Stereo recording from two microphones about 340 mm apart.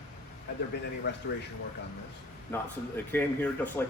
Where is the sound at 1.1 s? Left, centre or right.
Left.